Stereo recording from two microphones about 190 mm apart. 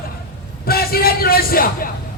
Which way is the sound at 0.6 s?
55° left (ahead or behind).